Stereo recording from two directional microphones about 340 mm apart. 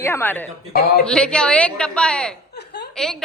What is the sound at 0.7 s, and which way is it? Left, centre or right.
Speech, left.